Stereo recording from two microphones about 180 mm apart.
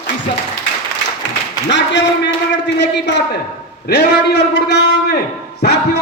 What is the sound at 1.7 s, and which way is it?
A man's voice, 75° left (ahead or behind).